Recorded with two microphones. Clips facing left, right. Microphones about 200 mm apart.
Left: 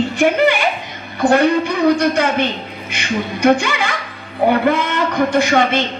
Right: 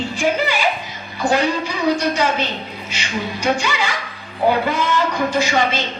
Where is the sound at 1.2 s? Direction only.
55° left (ahead or behind).